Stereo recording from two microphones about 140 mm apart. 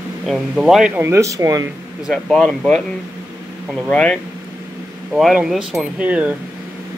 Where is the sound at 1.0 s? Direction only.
20° right (ahead or behind).